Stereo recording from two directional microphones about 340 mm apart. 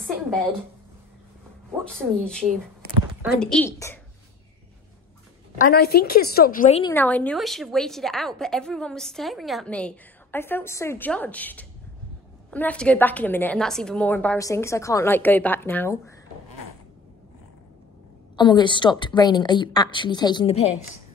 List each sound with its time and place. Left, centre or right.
0.0 s a sound: centre
1.9 s a woman's voice: centre
5.6 s a woman's voice: left
6.8 s a woman's voice: centre
18.3 s a woman's voice: centre